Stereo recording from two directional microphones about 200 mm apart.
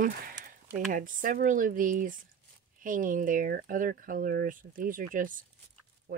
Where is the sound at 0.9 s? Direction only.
45° right (ahead or behind).